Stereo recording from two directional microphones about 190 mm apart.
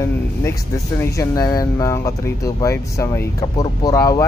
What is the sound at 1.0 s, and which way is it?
Speech, 15° left (ahead or behind).